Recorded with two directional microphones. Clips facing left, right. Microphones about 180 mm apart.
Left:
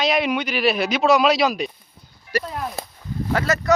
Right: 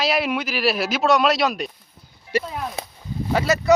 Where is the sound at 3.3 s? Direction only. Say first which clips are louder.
Right 2 dB; 10° right (ahead or behind).